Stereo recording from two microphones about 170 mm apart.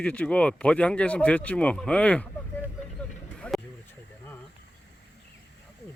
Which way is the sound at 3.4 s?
5° left (ahead or behind).